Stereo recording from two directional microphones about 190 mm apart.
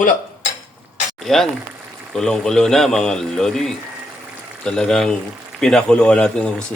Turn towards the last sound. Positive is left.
turn(degrees=5)  # may be behind; listen again after turning